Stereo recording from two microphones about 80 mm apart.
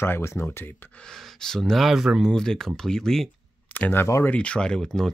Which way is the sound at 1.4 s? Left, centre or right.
Centre.